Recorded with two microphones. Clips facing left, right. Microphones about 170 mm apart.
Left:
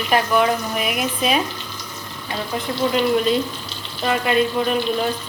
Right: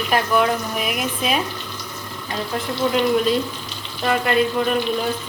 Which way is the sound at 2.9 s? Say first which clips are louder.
Even; centre (ahead or behind).